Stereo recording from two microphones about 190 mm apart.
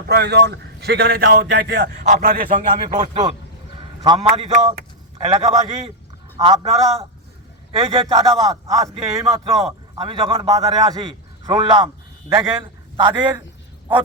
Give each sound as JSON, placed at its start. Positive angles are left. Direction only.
{"t": 0.1, "sound": "a man's voice", "side_deg": -60}
{"t": 2.8, "sound": "speech", "side_deg": -35}
{"t": 4.0, "sound": "a man's voice", "side_deg": -25}
{"t": 9.6, "sound": "a man's voice", "side_deg": -30}